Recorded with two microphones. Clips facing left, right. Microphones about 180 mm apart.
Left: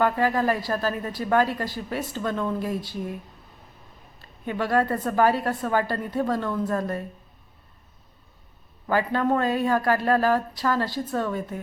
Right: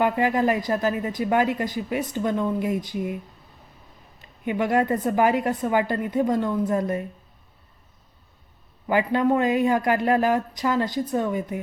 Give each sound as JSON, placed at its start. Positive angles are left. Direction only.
{"t": 0.0, "sound": "speech", "side_deg": -20}
{"t": 4.2, "sound": "speech", "side_deg": -15}
{"t": 8.9, "sound": "speech", "side_deg": -15}